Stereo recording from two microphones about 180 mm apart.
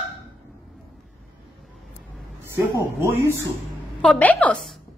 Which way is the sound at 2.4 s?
15° right (ahead or behind).